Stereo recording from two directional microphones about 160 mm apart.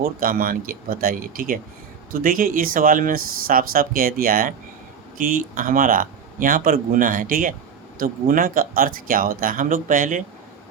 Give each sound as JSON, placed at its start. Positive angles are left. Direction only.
{"t": 0.0, "sound": "speech", "side_deg": -65}